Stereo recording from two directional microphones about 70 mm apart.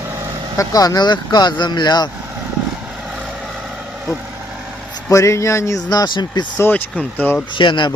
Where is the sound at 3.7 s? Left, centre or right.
Centre.